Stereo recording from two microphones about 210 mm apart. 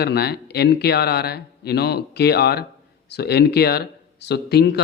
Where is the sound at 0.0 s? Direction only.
50° left (ahead or behind).